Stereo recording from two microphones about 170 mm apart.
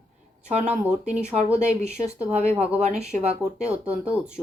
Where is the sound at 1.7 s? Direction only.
40° right (ahead or behind).